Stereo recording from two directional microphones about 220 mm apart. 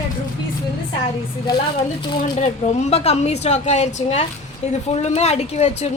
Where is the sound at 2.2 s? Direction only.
30° left (ahead or behind).